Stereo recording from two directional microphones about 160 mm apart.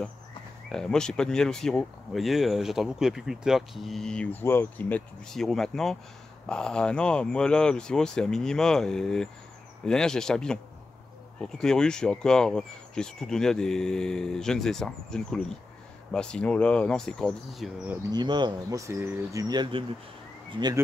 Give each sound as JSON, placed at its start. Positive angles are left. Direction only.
{"t": 0.7, "sound": "speech", "side_deg": 5}
{"t": 18.1, "sound": "speech", "side_deg": -30}